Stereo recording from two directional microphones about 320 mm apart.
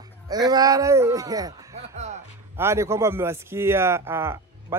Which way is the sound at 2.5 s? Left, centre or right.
Centre.